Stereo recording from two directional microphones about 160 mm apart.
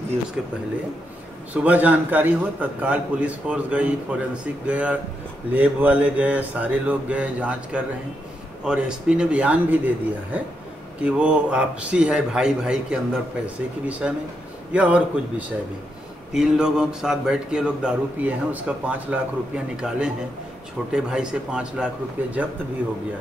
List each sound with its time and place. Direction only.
1.5 s a man's voice: 10° right (ahead or behind)